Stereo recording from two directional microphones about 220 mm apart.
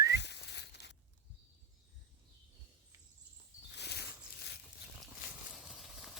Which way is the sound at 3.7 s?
50° left (ahead or behind).